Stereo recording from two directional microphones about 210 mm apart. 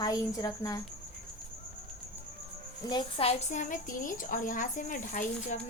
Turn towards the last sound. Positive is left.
turn(degrees=40)  # may be behind; listen again after turning